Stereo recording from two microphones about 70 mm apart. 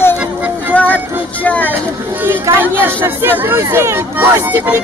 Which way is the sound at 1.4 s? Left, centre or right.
Left.